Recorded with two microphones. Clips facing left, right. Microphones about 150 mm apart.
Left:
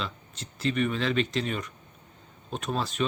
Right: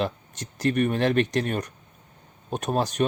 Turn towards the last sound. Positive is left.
turn(degrees=-50)  # may be behind; listen again after turning